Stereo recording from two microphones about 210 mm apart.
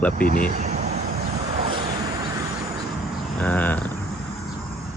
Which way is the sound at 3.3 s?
10° left (ahead or behind).